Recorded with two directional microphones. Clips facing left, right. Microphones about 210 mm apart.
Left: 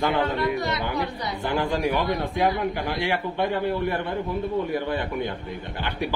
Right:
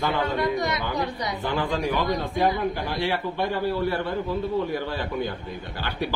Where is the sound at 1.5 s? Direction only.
15° left (ahead or behind).